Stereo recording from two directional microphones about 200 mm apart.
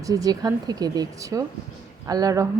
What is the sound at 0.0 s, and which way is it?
Speech, 15° right (ahead or behind).